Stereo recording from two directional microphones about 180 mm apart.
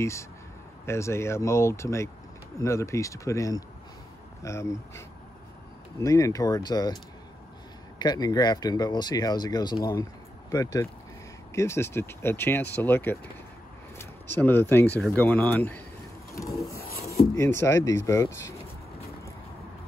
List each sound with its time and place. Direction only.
0.0 s speech: 15° left (ahead or behind)
8.0 s speech: 20° left (ahead or behind)
16.4 s a sound: centre (ahead or behind)
16.8 s filing: 55° left (ahead or behind)
17.4 s speech: 15° left (ahead or behind)